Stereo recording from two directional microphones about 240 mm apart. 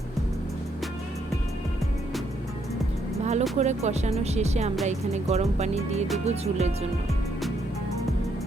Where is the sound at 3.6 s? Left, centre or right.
Right.